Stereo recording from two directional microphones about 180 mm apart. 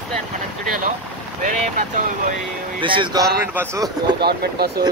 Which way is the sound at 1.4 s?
45° right (ahead or behind).